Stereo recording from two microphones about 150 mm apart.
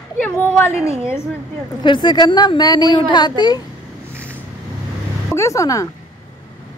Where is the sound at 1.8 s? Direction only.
30° left (ahead or behind).